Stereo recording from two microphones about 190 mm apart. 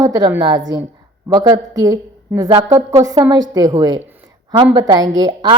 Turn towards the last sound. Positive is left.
turn(degrees=-20)  # may be behind; listen again after turning